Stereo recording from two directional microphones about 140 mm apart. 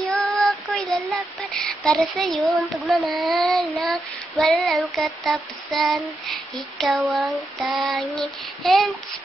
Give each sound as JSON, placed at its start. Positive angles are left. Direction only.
{"t": 0.1, "sound": "child singing", "side_deg": 0}
{"t": 0.7, "sound": "a sound", "side_deg": 0}
{"t": 3.1, "sound": "child singing", "side_deg": 0}